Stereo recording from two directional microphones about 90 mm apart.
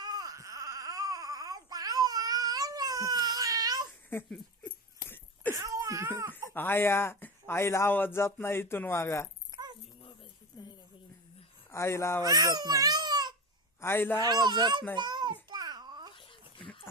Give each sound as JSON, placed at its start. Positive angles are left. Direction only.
{"t": 0.0, "sound": "baby cry", "side_deg": -45}
{"t": 5.0, "sound": "a sound", "side_deg": 20}
{"t": 5.5, "sound": "a sound", "side_deg": -35}
{"t": 6.5, "sound": "speech", "side_deg": 25}
{"t": 9.5, "sound": "dog", "side_deg": -50}
{"t": 11.7, "sound": "speech", "side_deg": 30}
{"t": 12.2, "sound": "speech", "side_deg": -45}
{"t": 13.8, "sound": "speech", "side_deg": 25}
{"t": 14.2, "sound": "a child's voice", "side_deg": -50}
{"t": 14.9, "sound": "babbling", "side_deg": -55}